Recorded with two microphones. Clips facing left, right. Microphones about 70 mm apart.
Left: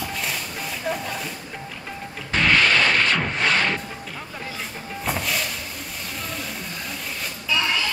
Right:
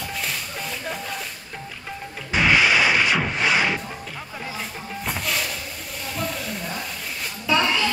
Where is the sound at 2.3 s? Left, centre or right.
Centre.